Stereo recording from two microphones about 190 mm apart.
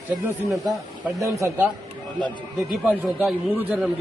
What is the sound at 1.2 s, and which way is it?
A man's voice, 15° right (ahead or behind).